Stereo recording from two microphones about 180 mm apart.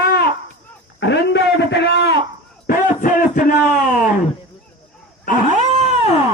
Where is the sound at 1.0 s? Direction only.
75° left (ahead or behind).